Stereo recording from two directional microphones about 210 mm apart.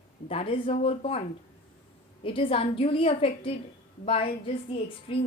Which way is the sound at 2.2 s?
25° left (ahead or behind).